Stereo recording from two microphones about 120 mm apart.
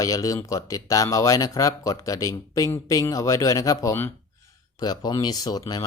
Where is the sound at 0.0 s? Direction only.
30° left (ahead or behind).